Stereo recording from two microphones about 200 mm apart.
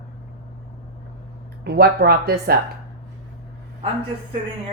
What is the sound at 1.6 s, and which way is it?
Speech, 55° right (ahead or behind).